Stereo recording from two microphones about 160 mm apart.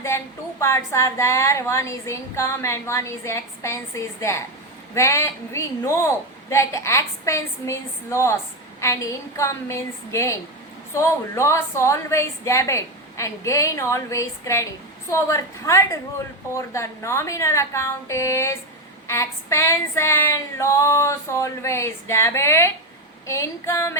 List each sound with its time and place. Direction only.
0.1 s a woman's voice: 20° left (ahead or behind)